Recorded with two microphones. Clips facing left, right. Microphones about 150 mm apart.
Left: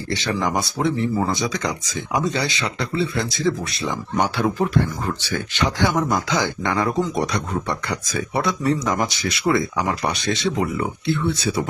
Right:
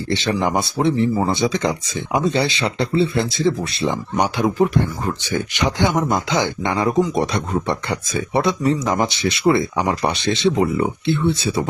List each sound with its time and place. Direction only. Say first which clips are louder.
0.1 s speech: right 3 dB; 25° right (ahead or behind)